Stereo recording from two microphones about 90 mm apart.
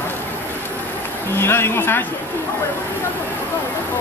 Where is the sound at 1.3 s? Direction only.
25° left (ahead or behind).